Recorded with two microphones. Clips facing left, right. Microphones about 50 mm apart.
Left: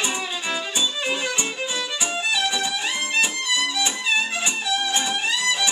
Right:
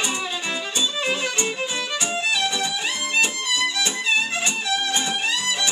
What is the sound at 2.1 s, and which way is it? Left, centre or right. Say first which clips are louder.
Music: even; centre.